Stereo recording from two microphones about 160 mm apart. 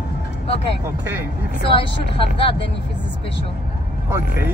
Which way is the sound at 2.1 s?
35° left (ahead or behind).